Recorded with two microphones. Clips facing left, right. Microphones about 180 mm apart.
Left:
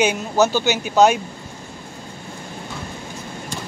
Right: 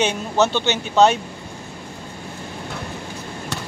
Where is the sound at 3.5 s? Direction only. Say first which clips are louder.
Right 1 dB; 70° right (ahead or behind).